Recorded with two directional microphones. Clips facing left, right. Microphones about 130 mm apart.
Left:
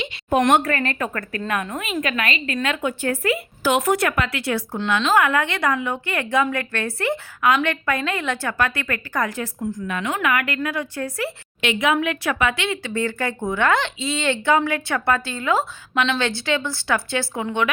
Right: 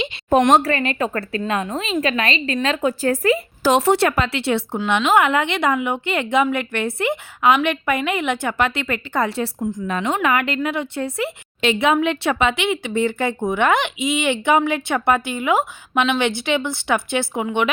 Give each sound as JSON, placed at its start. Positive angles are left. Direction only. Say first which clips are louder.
{"t": 0.5, "sound": "speech", "louder": "right 3 dB", "side_deg": -30}
{"t": 0.8, "sound": "speech", "louder": "right 3 dB", "side_deg": -20}